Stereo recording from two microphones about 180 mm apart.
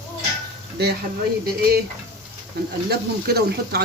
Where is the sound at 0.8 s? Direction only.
65° right (ahead or behind).